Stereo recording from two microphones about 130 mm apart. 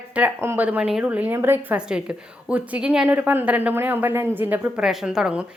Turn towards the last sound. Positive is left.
turn(degrees=-5)  # may be behind; listen again after turning